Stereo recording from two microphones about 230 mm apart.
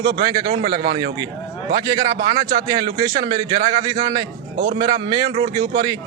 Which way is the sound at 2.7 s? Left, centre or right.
Centre.